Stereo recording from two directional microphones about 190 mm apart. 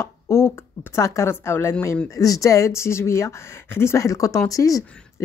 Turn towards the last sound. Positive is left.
turn(degrees=15)  # may be behind; listen again after turning